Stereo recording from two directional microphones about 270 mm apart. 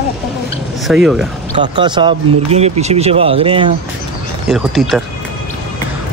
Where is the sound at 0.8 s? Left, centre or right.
Centre.